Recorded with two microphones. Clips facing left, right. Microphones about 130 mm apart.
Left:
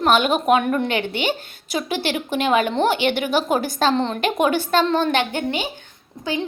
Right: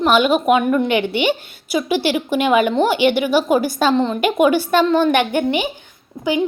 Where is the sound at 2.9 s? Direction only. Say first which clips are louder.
Right 5 dB; 50° left (ahead or behind).